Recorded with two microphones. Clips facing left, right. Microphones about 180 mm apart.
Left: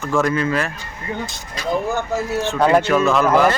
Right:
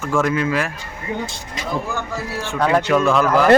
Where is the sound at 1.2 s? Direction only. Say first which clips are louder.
Right 1 dB; 30° right (ahead or behind).